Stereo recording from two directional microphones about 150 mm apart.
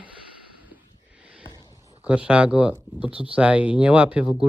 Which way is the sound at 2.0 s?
10° right (ahead or behind).